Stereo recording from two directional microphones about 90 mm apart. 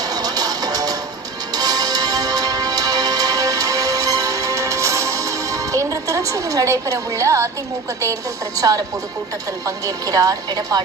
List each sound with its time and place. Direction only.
0.1 s music: 45° right (ahead or behind)
8.5 s a woman's voice: 40° right (ahead or behind)